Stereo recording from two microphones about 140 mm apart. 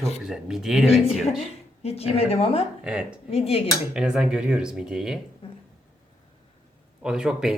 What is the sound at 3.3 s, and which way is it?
Speech, 45° left (ahead or behind).